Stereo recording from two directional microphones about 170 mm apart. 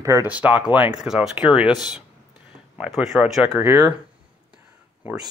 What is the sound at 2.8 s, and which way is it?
Speech, 5° right (ahead or behind).